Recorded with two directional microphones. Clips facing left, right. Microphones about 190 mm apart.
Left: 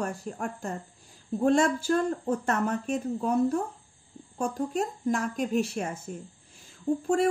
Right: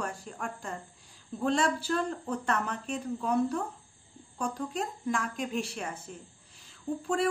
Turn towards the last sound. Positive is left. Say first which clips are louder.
# left 4 dB
turn(degrees=45)  # may be behind; listen again after turning